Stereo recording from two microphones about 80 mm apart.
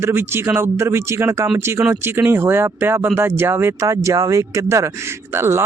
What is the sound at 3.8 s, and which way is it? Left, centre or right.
Speech, right.